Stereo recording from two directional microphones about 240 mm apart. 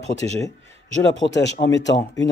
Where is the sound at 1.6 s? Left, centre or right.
Left.